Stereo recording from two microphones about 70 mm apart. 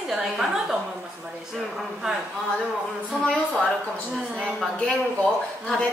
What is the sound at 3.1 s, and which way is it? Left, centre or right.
A woman's voice, centre.